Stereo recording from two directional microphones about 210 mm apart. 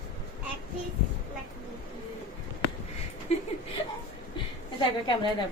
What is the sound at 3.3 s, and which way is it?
Speech, 30° left (ahead or behind).